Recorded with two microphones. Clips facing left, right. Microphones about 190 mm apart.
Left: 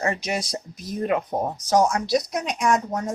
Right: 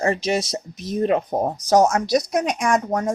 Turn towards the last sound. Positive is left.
turn(degrees=-50)  # may be behind; listen again after turning